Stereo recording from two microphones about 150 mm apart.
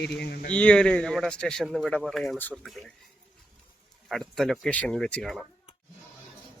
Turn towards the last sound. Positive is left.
turn(degrees=5)  # may be behind; listen again after turning